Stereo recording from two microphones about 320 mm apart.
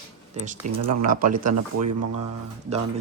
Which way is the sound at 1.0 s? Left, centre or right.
Right.